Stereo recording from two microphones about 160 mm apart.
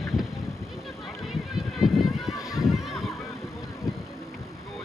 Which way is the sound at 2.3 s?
20° left (ahead or behind).